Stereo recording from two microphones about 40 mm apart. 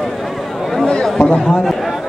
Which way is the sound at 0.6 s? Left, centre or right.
Centre.